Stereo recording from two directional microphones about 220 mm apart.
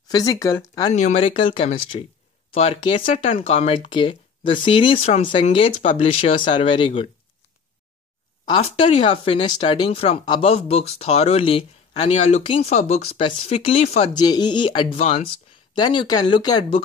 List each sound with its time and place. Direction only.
0.1 s speech: 15° left (ahead or behind)
0.9 s speech: 30° left (ahead or behind)
8.5 s speech: 25° left (ahead or behind)
15.7 s speech: 20° left (ahead or behind)